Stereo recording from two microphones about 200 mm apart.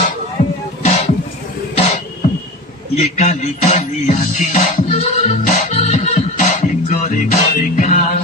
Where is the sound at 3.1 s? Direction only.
35° left (ahead or behind).